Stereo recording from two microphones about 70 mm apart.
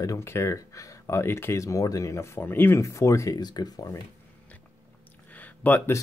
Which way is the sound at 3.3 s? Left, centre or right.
Left.